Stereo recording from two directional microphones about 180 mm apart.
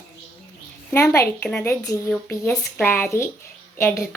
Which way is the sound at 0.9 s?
15° left (ahead or behind).